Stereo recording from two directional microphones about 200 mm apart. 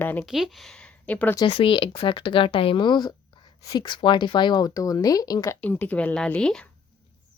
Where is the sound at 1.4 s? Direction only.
25° left (ahead or behind); by 6.7 s 5° left (ahead or behind).